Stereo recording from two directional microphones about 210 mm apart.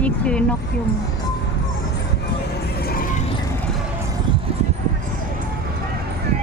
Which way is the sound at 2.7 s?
45° left (ahead or behind).